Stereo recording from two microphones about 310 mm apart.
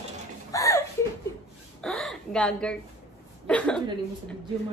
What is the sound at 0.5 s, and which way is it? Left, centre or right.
A woman's voice, centre.